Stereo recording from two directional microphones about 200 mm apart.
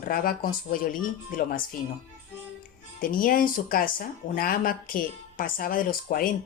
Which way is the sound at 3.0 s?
45° left (ahead or behind).